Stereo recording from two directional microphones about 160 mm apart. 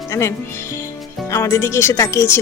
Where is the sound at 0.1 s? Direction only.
15° left (ahead or behind).